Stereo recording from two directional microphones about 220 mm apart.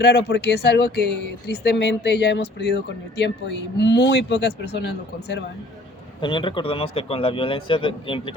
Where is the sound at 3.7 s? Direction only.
50° left (ahead or behind).